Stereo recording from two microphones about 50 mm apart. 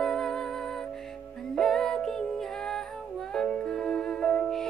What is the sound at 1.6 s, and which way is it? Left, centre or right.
Music, centre.